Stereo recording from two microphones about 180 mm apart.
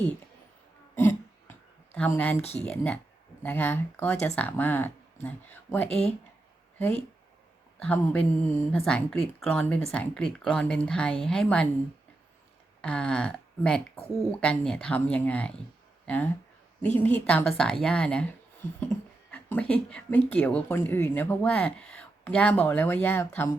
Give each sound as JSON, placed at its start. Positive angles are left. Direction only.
{"t": 0.9, "sound": "a sound", "side_deg": 10}
{"t": 2.0, "sound": "speech", "side_deg": 10}
{"t": 5.9, "sound": "speech", "side_deg": 35}
{"t": 6.7, "sound": "speech", "side_deg": 10}
{"t": 12.8, "sound": "speech", "side_deg": 5}
{"t": 19.3, "sound": "speech", "side_deg": 5}